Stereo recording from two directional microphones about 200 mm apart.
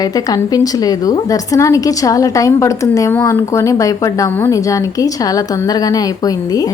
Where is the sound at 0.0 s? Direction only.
20° left (ahead or behind).